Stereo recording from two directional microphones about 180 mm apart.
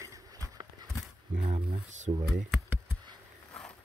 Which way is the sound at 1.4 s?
30° right (ahead or behind).